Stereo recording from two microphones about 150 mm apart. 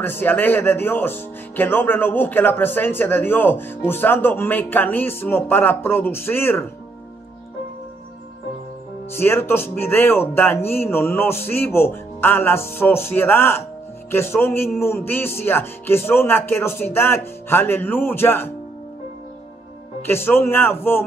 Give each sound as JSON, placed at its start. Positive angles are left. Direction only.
{"t": 0.0, "sound": "speech", "side_deg": 15}
{"t": 9.1, "sound": "speech", "side_deg": 15}
{"t": 20.0, "sound": "speech", "side_deg": 15}